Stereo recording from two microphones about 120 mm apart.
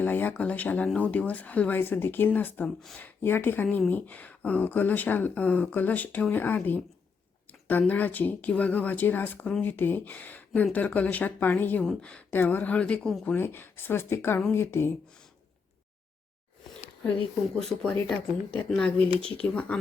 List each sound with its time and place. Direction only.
0.0 s speech: 15° left (ahead or behind)
13.3 s speech: 15° left (ahead or behind)
17.5 s speech: 5° left (ahead or behind)